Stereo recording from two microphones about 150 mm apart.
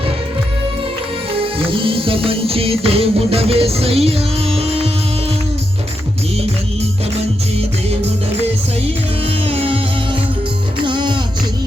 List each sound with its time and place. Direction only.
1.4 s music: 35° right (ahead or behind)
9.2 s music: 40° right (ahead or behind)
10.8 s music: 30° right (ahead or behind)